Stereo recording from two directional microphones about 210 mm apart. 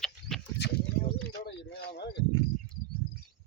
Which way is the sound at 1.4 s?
55° left (ahead or behind).